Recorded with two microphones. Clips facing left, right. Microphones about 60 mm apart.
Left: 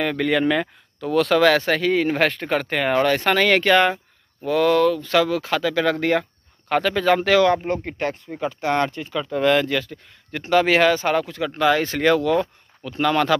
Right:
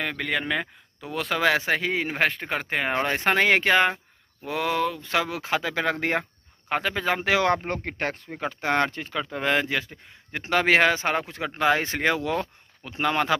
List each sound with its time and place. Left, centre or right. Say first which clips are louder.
0.0 s speech: left 8 dB; centre
2.9 s speech: left 6 dB; right
6.7 s speech: left 7 dB; centre
7.5 s speech: left 4 dB; right